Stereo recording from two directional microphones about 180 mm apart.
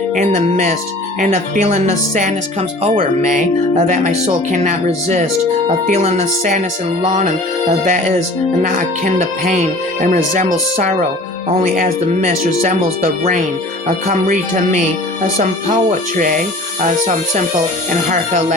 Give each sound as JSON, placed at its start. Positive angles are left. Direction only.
{"t": 0.2, "sound": "speech", "side_deg": -45}
{"t": 14.1, "sound": "speech", "side_deg": -40}
{"t": 18.1, "sound": "speech", "side_deg": -40}